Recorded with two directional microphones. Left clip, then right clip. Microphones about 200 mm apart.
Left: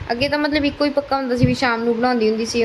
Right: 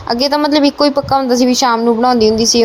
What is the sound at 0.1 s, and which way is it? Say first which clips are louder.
A woman's voice: right 6 dB; 20° right (ahead or behind).